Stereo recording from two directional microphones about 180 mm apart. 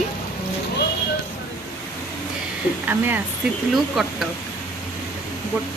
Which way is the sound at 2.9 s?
10° right (ahead or behind).